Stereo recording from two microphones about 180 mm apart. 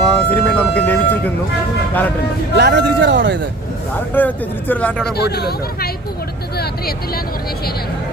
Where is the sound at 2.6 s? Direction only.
70° right (ahead or behind).